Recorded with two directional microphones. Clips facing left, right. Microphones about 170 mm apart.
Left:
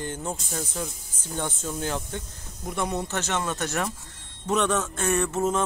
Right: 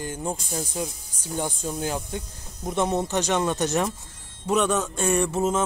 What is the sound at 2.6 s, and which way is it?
A man's voice, 25° right (ahead or behind).